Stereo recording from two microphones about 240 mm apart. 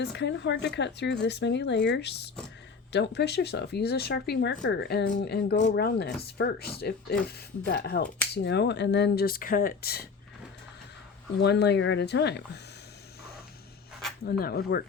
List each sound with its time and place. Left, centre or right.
0.0 s speech: left
11.3 s speech: left
14.3 s speech: left